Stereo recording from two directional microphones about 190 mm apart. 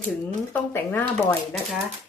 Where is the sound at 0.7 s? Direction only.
10° left (ahead or behind).